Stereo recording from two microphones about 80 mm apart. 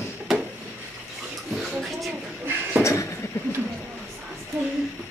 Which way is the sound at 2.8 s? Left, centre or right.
Left.